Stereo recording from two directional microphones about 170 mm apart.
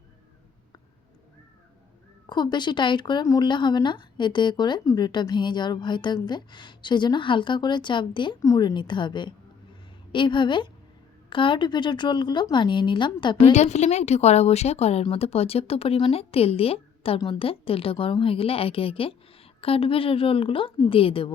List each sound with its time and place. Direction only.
2.2 s speech: 25° left (ahead or behind)
13.5 s speech: 40° left (ahead or behind)